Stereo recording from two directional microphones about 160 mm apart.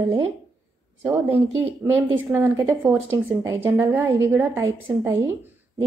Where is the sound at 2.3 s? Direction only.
15° right (ahead or behind).